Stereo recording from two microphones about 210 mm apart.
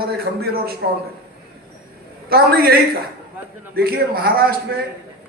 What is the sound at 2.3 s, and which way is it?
A man's voice, 45° right (ahead or behind).